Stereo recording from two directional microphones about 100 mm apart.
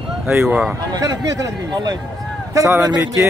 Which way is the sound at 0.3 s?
25° right (ahead or behind).